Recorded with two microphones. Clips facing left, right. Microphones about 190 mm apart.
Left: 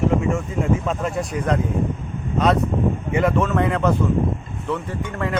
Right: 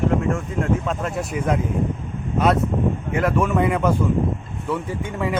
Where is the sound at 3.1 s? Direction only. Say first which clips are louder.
Left 1 dB; centre (ahead or behind).